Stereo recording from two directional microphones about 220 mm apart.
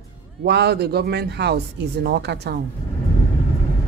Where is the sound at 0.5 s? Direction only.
50° right (ahead or behind).